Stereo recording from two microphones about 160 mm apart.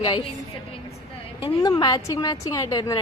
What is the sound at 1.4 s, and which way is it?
A woman's voice, 25° left (ahead or behind).